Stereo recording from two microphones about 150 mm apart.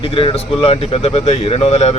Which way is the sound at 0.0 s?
35° left (ahead or behind).